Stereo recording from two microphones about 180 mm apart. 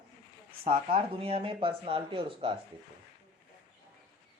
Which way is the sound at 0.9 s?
30° right (ahead or behind).